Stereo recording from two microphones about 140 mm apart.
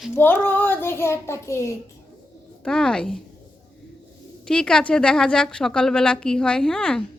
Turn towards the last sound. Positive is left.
turn(degrees=5)  # may be behind; listen again after turning